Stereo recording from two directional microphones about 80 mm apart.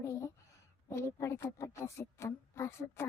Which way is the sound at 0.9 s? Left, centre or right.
Left.